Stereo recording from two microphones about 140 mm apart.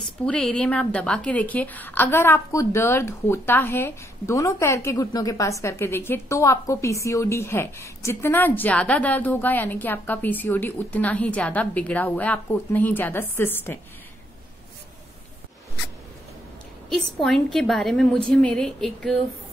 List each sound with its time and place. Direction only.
0.0 s a woman's voice: 10° left (ahead or behind)
16.9 s a woman's voice: centre (ahead or behind)